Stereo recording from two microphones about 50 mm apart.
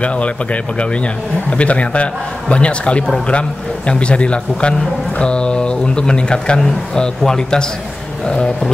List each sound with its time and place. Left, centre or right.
0.0 s a man's voice: left